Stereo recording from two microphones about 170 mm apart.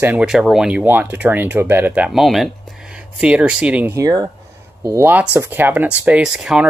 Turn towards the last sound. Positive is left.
turn(degrees=-5)  # may be behind; listen again after turning